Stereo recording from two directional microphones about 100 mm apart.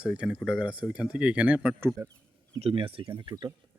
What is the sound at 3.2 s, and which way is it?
Speech, 45° right (ahead or behind).